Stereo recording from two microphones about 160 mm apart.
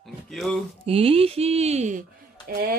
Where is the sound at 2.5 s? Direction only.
65° right (ahead or behind).